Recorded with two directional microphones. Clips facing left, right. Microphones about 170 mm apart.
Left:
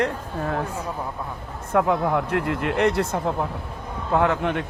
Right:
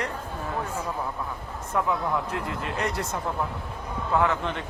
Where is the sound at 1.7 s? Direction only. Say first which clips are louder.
Left 6 dB; 65° left (ahead or behind).